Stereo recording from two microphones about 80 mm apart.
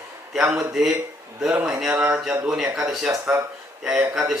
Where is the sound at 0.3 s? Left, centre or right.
Centre.